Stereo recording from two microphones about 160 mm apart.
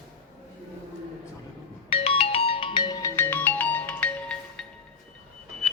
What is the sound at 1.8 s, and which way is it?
Music, 35° left (ahead or behind).